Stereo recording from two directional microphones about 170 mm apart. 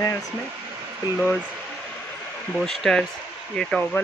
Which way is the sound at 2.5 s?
Centre (ahead or behind).